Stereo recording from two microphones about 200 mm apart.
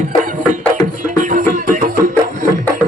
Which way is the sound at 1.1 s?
40° right (ahead or behind).